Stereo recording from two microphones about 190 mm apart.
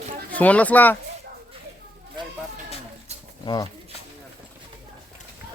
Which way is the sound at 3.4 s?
20° left (ahead or behind).